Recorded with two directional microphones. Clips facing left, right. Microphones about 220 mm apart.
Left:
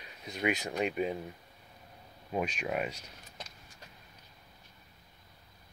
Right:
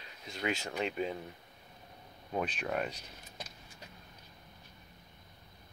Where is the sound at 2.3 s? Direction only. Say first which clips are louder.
Left 1 dB; 10° left (ahead or behind).